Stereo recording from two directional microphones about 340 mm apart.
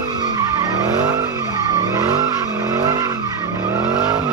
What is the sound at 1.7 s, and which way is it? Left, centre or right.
Vehicle, centre.